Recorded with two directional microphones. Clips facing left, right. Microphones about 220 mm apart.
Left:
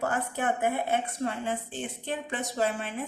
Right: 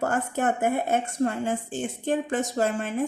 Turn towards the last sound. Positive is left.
turn(degrees=-45)  # may be behind; listen again after turning